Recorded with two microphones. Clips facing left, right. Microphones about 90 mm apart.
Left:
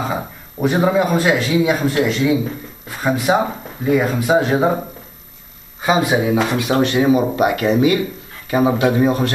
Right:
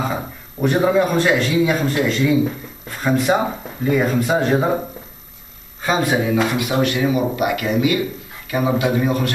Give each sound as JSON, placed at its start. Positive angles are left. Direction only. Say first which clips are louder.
{"t": 0.0, "sound": "speech", "louder": "left 1 dB", "side_deg": 5}
{"t": 5.8, "sound": "speech", "louder": "left 2 dB", "side_deg": 15}
{"t": 6.8, "sound": "speech", "louder": "left 4 dB", "side_deg": 30}